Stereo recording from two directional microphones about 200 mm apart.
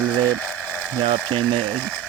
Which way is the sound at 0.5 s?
10° right (ahead or behind).